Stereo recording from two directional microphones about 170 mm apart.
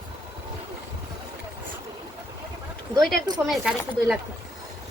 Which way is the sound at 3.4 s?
Centre (ahead or behind).